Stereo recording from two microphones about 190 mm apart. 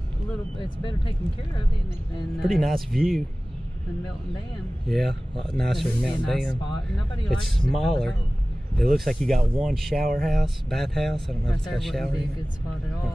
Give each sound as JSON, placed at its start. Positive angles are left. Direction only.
{"t": 0.6, "sound": "speech", "side_deg": 25}
{"t": 2.4, "sound": "speech", "side_deg": 0}
{"t": 4.8, "sound": "speech", "side_deg": 0}